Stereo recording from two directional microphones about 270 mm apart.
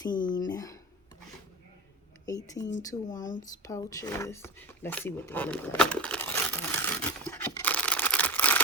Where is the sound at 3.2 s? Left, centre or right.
Left.